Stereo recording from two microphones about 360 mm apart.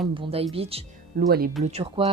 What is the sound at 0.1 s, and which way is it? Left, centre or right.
Speech, centre.